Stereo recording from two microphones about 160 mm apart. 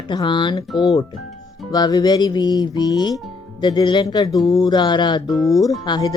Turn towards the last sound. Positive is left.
turn(degrees=25)  # may be behind; listen again after turning